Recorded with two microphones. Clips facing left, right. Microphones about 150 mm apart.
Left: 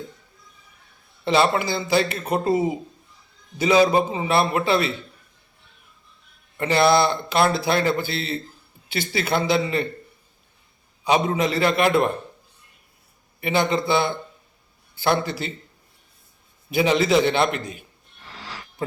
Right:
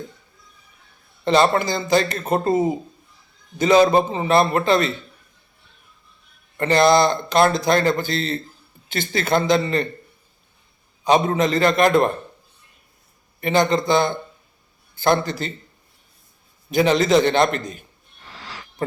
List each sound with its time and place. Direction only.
1.2 s a man's voice: 5° left (ahead or behind)
6.6 s a man's voice: 5° left (ahead or behind)
11.0 s a man's voice: 5° left (ahead or behind)
13.4 s a man's voice: 5° left (ahead or behind)
16.7 s a man's voice: 5° left (ahead or behind)